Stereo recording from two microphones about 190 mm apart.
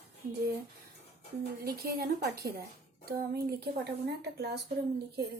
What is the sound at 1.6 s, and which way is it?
A woman's voice, 55° right (ahead or behind).